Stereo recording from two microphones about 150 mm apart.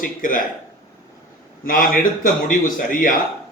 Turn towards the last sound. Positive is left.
turn(degrees=65)  # may be behind; listen again after turning